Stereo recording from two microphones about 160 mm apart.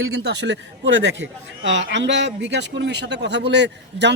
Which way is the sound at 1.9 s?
90° right.